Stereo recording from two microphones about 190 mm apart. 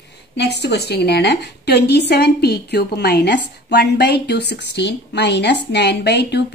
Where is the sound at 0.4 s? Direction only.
60° left (ahead or behind).